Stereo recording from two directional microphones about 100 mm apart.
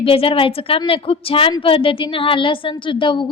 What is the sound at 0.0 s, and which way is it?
A woman's voice, 65° left (ahead or behind).